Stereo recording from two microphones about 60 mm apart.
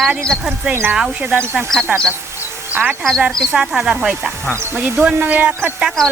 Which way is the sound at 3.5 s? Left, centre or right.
Centre.